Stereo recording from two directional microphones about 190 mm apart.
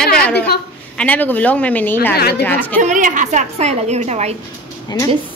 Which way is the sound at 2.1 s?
55° left (ahead or behind).